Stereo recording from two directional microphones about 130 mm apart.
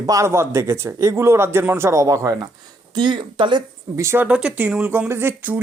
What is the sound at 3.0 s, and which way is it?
Speech, 35° right (ahead or behind).